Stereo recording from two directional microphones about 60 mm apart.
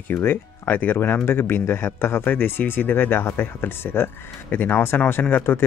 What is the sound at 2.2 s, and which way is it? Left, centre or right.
Speech, left.